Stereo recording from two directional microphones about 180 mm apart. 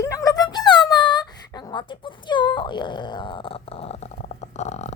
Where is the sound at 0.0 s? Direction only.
20° left (ahead or behind).